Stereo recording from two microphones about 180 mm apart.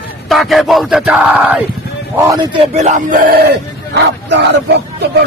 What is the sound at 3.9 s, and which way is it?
Speech, 75° right (ahead or behind).